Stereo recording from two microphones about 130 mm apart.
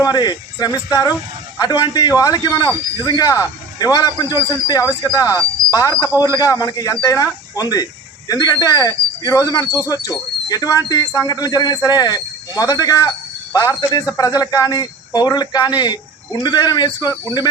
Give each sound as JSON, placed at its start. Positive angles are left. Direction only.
{"t": 0.0, "sound": "a man's voice", "side_deg": 30}